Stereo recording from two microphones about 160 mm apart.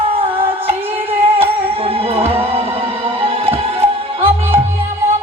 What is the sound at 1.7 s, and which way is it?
Music, 35° right (ahead or behind).